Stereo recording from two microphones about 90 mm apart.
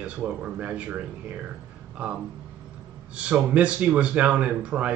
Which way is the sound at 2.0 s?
15° right (ahead or behind).